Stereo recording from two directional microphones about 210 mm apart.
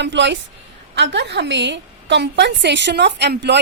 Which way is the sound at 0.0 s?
55° right (ahead or behind).